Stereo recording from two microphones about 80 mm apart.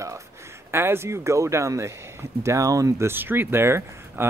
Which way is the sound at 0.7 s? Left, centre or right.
Right.